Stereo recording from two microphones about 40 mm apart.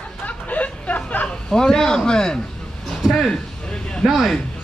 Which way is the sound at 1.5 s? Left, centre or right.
Centre.